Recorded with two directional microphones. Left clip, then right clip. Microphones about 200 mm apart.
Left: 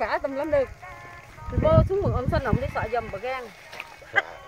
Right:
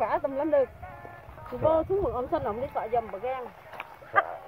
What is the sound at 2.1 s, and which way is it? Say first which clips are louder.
Speech: left 2 dB; 15° left (ahead or behind).